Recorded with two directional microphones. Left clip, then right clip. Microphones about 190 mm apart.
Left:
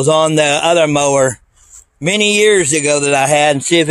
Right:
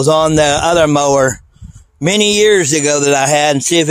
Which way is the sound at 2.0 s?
30° right (ahead or behind).